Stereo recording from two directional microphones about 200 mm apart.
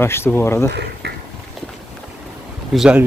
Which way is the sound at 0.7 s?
55° right (ahead or behind).